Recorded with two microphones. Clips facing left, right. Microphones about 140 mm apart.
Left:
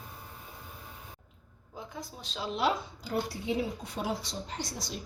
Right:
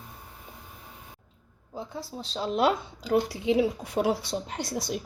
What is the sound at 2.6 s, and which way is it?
A woman's voice, 75° right (ahead or behind).